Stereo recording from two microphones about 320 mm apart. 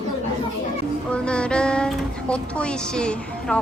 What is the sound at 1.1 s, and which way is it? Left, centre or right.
A woman's voice, centre.